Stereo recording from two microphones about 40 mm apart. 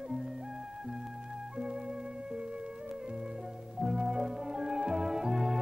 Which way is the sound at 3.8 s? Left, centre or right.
Centre.